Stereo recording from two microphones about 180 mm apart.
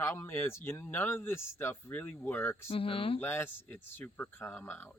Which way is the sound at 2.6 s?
30° left (ahead or behind).